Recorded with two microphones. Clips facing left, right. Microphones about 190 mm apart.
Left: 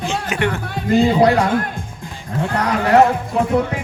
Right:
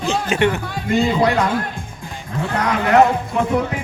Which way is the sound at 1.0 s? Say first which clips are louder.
Left 3 dB; 35° left (ahead or behind).